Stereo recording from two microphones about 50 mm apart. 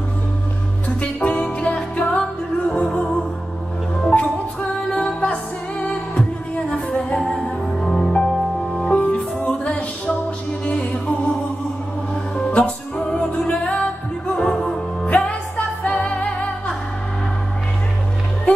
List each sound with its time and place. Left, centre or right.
1.0 s music: left
4.1 s music: left; by 8.9 s centre
8.9 s music: left
12.4 s music: left
14.3 s music: centre
15.5 s music: left